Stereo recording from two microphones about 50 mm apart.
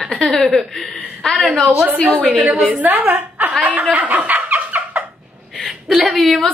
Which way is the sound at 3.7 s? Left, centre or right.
Right.